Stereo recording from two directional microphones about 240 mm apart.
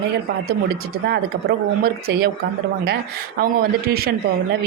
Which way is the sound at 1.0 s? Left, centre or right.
Right.